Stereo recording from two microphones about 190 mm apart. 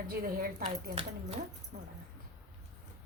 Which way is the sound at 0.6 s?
30° right (ahead or behind).